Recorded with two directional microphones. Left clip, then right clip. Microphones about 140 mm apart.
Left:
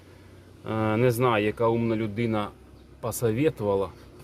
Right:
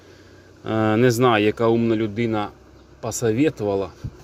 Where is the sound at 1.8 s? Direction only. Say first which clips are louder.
Right 6 dB; 20° right (ahead or behind).